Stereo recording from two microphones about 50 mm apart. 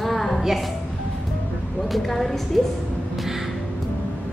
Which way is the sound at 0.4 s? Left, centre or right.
Centre.